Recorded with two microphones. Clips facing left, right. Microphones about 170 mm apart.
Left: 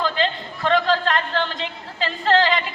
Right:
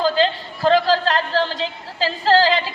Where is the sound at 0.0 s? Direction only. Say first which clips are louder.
Right 5 dB; 35° right (ahead or behind).